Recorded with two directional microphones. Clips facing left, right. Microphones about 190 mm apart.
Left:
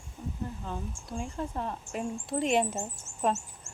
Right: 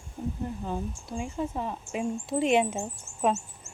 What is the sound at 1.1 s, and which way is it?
Speech, 5° right (ahead or behind).